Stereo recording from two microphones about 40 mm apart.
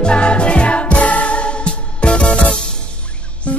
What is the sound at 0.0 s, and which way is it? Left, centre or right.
Music, left.